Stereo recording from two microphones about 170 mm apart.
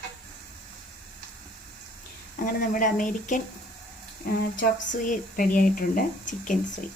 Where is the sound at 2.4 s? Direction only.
50° left (ahead or behind).